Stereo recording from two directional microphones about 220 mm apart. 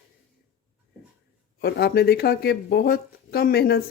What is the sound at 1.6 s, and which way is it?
Speech, 45° left (ahead or behind).